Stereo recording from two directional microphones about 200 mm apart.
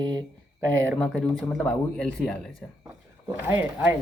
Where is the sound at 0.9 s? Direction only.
5° left (ahead or behind).